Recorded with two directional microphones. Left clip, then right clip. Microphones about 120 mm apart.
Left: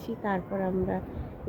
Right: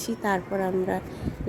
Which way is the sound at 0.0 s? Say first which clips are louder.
Right 5 dB; 45° right (ahead or behind).